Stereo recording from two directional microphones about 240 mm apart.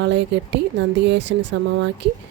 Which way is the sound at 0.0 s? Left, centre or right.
Right.